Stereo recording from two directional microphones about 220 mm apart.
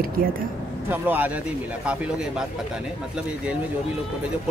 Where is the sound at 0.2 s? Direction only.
40° right (ahead or behind).